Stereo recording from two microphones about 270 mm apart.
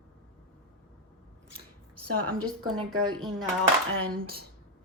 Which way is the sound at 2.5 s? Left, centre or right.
Centre.